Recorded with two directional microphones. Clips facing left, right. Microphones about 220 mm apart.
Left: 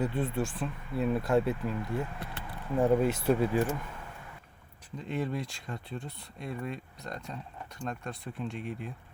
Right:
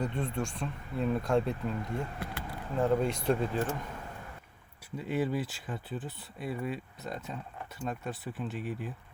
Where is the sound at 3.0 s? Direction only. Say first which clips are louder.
Left 3 dB; 5° left (ahead or behind).